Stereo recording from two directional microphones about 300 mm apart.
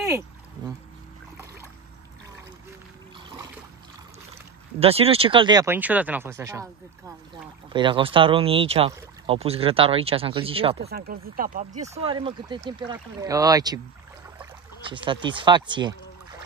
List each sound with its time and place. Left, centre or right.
4.7 s speech: centre
10.9 s speech: right; by 16.0 s centre